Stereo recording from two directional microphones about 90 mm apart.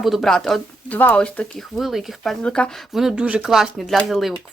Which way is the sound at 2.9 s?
5° right (ahead or behind).